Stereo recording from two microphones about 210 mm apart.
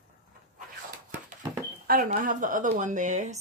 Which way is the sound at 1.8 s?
40° right (ahead or behind).